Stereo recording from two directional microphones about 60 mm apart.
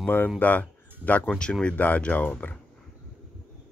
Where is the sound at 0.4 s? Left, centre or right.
Left.